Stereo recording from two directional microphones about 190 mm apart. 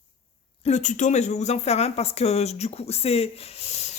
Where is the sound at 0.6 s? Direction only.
35° left (ahead or behind).